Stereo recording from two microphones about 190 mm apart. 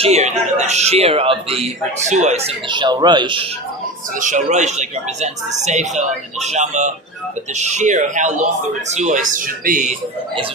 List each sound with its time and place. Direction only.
0.0 s speech: 35° right (ahead or behind)
2.5 s speech: 25° right (ahead or behind)
4.2 s speech: 40° right (ahead or behind)